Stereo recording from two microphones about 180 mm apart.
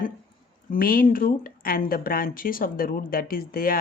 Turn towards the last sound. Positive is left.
turn(degrees=50)  # may be behind; listen again after turning